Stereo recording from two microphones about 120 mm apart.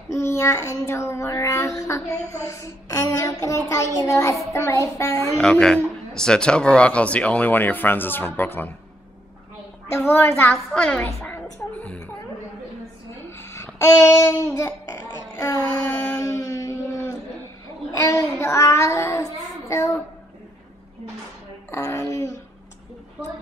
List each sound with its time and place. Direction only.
0.1 s speech: 25° left (ahead or behind)
5.4 s a man's voice: 5° left (ahead or behind)
9.9 s speech: 20° left (ahead or behind)
10.7 s a man's voice: 10° left (ahead or behind)
11.4 s music: 10° left (ahead or behind)
13.4 s a sound: 25° left (ahead or behind)
13.7 s child singing: 20° left (ahead or behind)
16.0 s a sound: 20° left (ahead or behind)
18.0 s speech: 25° left (ahead or behind)
21.6 s speech: 25° left (ahead or behind)